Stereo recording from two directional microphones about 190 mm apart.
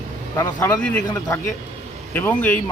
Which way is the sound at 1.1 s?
20° left (ahead or behind).